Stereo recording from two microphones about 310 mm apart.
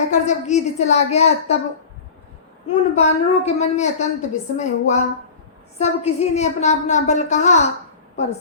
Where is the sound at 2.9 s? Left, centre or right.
Left.